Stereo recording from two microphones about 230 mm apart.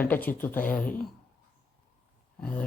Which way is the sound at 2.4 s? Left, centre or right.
Centre.